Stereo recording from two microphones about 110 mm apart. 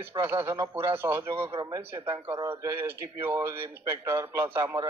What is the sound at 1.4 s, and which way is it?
Speech, 50° right (ahead or behind).